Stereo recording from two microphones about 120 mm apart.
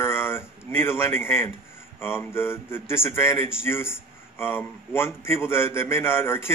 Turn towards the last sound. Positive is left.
turn(degrees=20)  # may be behind; listen again after turning